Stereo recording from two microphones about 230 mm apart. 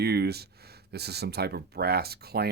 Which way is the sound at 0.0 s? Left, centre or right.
Right.